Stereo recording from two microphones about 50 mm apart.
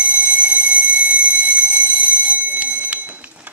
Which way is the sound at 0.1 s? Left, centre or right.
Right.